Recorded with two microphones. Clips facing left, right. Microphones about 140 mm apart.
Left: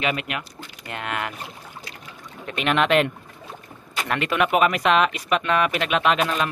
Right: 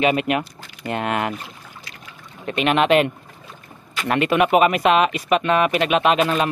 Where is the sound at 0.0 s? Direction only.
30° right (ahead or behind).